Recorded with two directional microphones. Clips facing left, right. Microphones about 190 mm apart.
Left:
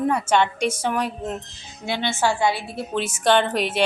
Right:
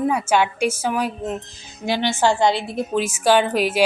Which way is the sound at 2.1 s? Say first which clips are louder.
Right 3 dB; 15° right (ahead or behind).